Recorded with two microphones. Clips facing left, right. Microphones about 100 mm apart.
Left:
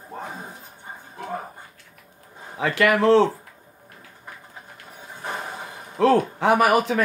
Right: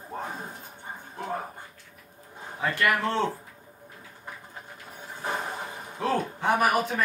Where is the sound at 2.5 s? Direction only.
90° left.